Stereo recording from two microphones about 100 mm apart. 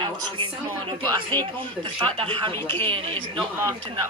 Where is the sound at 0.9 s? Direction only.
50° right (ahead or behind).